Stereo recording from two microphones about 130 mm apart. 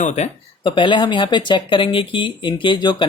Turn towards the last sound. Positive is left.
turn(degrees=35)  # may be behind; listen again after turning